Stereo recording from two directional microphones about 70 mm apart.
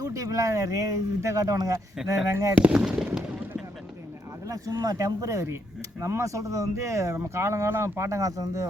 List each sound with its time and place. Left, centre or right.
0.0 s speech: right
2.6 s speech: centre
4.4 s speech: right